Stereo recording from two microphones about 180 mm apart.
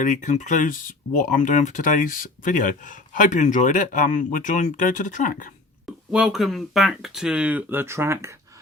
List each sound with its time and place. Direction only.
0.0 s speech: 45° left (ahead or behind)
5.8 s speech: 5° right (ahead or behind)